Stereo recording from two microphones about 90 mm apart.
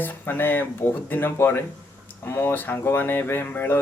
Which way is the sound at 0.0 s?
25° left (ahead or behind).